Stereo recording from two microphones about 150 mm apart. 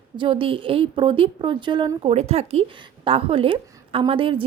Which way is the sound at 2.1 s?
45° right (ahead or behind).